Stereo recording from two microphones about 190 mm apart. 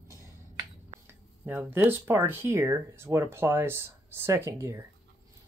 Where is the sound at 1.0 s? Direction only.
10° right (ahead or behind).